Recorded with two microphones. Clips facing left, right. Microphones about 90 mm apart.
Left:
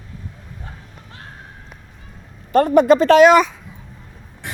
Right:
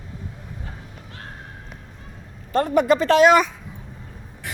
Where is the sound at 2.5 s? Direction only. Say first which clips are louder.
Left 6 dB; 75° left (ahead or behind); by 3.5 s 90° left.